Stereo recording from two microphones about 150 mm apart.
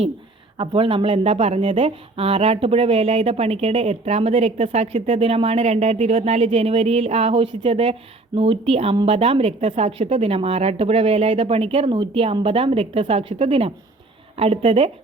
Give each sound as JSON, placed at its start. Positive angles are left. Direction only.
{"t": 0.5, "sound": "speech", "side_deg": -35}